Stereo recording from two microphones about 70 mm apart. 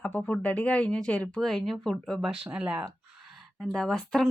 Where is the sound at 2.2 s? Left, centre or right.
Centre.